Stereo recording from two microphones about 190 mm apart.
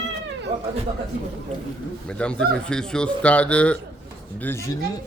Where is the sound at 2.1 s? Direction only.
5° left (ahead or behind).